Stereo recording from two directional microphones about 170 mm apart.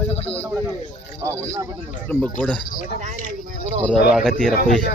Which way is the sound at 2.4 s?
5° left (ahead or behind).